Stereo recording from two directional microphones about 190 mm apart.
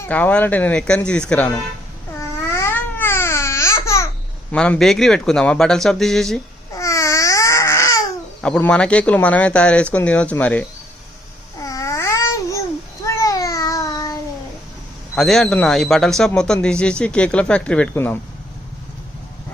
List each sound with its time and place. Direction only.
0.0 s speech: 10° left (ahead or behind)
2.6 s babbling: 10° left (ahead or behind)
4.5 s a man's voice: 5° left (ahead or behind)
6.7 s babbling: 15° left (ahead or behind)
8.4 s speech: 5° left (ahead or behind)
11.6 s babbling: 15° left (ahead or behind)
15.1 s a man's voice: centre (ahead or behind)